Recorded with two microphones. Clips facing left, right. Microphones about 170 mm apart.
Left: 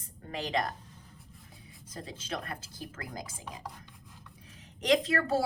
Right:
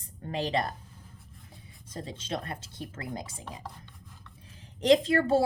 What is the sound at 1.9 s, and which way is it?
A woman's voice, 30° right (ahead or behind).